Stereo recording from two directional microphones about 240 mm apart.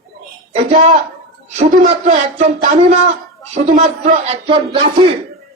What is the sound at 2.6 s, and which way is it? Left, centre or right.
Speech, right.